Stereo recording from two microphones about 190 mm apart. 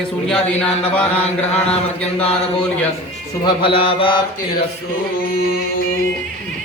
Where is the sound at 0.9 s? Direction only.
5° left (ahead or behind).